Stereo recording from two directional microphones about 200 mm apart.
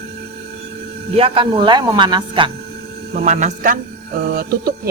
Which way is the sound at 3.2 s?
40° right (ahead or behind).